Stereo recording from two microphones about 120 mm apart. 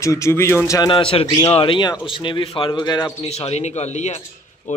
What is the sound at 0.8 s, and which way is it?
A man's voice, 45° left (ahead or behind).